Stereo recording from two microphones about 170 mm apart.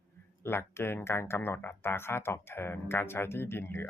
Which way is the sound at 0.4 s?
15° left (ahead or behind).